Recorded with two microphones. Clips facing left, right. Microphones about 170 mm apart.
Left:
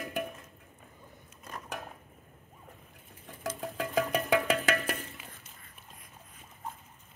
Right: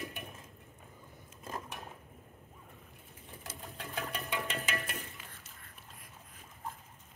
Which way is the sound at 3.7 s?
90° left.